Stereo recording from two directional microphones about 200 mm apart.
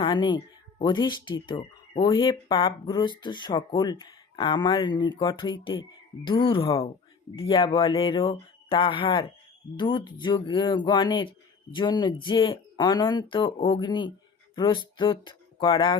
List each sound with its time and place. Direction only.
0.0 s speech: 25° left (ahead or behind)